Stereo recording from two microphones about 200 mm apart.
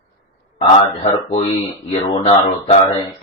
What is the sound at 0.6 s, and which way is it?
A man's voice, 30° left (ahead or behind).